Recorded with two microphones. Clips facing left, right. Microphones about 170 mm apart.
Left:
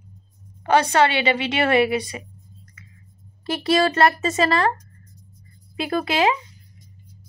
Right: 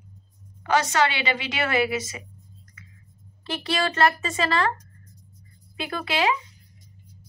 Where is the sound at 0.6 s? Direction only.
55° left (ahead or behind).